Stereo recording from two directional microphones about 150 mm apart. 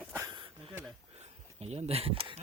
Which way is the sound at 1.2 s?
45° right (ahead or behind).